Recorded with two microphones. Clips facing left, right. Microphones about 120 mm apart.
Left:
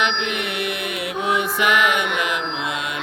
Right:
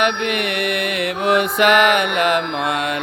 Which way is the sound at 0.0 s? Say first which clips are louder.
Right 4 dB; 60° right (ahead or behind).